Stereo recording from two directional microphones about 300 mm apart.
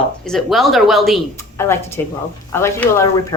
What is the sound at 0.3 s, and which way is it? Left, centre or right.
Speech, centre.